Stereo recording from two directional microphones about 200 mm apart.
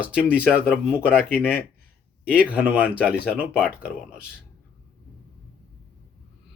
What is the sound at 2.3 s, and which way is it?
Speech, 5° right (ahead or behind).